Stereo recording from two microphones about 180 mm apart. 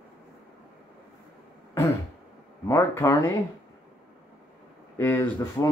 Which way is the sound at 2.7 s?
15° left (ahead or behind).